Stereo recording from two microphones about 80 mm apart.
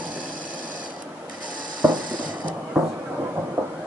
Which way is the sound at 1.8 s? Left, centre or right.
Right.